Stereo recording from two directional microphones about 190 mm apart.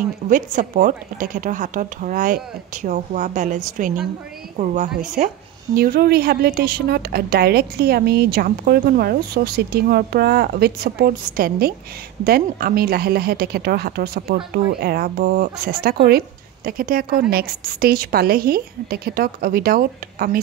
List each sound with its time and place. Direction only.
0.3 s a woman's voice: 45° right (ahead or behind)
5.8 s a woman's voice: 50° right (ahead or behind)